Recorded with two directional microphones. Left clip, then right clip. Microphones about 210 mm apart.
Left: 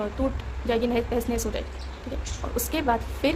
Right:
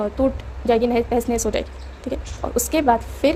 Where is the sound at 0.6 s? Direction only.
25° right (ahead or behind).